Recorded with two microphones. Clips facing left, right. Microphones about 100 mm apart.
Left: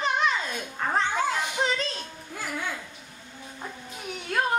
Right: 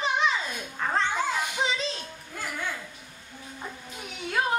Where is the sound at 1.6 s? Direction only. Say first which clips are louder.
Left 2 dB; 5° right (ahead or behind).